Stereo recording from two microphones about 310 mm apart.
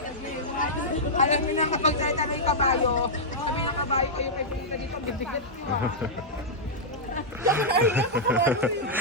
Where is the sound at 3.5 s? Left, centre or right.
Centre.